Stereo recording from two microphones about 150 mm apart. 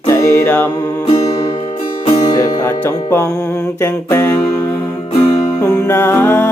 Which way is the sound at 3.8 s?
15° left (ahead or behind).